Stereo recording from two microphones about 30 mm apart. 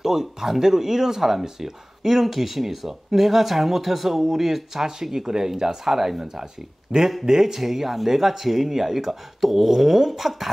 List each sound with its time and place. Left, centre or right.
0.0 s speech: centre
5.2 s speech: right